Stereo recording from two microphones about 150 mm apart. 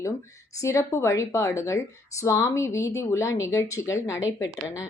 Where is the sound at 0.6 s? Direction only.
20° left (ahead or behind).